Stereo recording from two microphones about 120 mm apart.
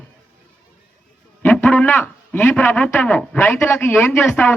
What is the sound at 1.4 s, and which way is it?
A man's voice, 15° left (ahead or behind).